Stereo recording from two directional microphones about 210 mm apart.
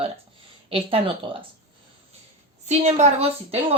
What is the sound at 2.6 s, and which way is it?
Speech, 30° right (ahead or behind).